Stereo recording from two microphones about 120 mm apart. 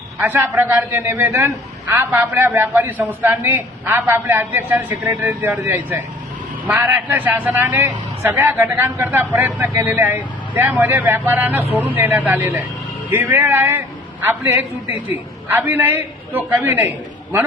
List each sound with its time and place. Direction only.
0.2 s a man's voice: 15° right (ahead or behind)